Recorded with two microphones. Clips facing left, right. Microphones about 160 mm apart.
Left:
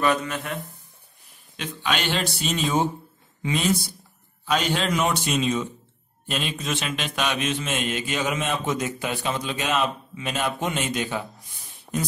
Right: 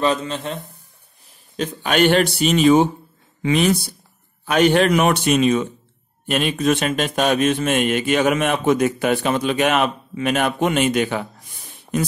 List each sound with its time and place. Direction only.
0.0 s speech: 25° right (ahead or behind)
1.6 s speech: 45° right (ahead or behind); by 11.2 s 65° right (ahead or behind)